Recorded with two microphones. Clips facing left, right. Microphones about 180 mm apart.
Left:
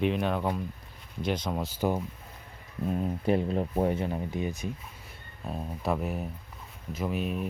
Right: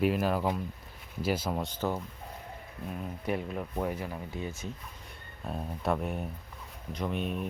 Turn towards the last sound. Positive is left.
turn(degrees=0)  # may be behind; listen again after turning